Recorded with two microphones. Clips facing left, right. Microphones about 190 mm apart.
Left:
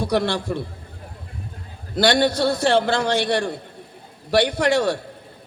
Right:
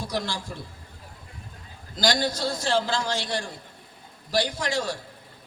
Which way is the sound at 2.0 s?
65° left (ahead or behind).